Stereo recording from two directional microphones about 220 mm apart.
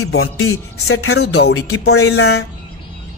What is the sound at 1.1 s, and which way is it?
Speech, 50° left (ahead or behind).